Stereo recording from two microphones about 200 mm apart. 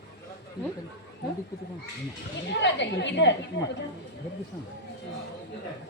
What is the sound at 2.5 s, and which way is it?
Speech, 60° left (ahead or behind).